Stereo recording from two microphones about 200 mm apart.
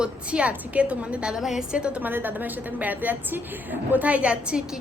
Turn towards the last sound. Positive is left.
turn(degrees=-5)  # may be behind; listen again after turning